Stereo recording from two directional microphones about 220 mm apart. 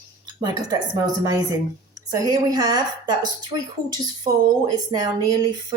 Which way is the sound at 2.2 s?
15° right (ahead or behind).